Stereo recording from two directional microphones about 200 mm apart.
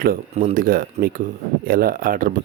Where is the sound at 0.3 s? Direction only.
35° right (ahead or behind).